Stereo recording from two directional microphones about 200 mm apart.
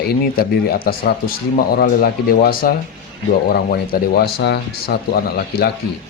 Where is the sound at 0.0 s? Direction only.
50° left (ahead or behind).